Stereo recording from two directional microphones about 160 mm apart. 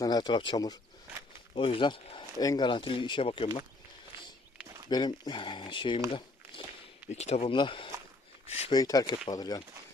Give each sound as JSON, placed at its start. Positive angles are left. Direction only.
{"t": 0.0, "sound": "speech", "side_deg": 25}
{"t": 4.9, "sound": "speech", "side_deg": 25}
{"t": 7.1, "sound": "speech", "side_deg": 45}
{"t": 7.5, "sound": "speech", "side_deg": 30}
{"t": 8.7, "sound": "speech", "side_deg": 20}